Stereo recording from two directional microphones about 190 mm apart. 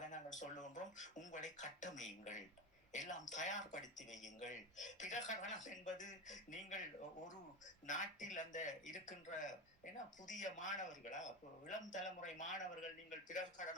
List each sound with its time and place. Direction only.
0.0 s speech: 40° left (ahead or behind)
7.9 s speech: 40° left (ahead or behind)